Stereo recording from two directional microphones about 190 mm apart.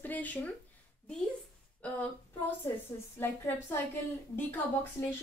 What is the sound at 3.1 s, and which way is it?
Speech, 10° left (ahead or behind).